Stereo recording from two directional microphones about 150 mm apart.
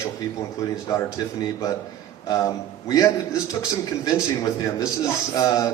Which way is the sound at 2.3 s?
25° left (ahead or behind).